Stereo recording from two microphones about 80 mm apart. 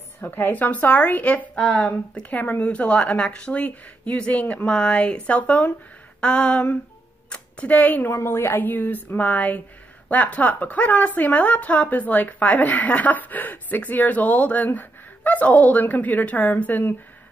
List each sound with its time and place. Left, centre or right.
0.2 s speech: left
8.1 s speech: left